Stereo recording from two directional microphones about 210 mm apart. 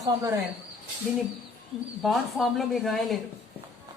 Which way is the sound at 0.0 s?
15° right (ahead or behind).